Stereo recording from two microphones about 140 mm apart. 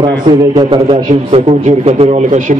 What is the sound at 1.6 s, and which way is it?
Speech, 50° right (ahead or behind).